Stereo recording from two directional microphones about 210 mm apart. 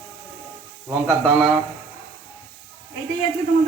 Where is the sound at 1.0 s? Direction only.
5° left (ahead or behind).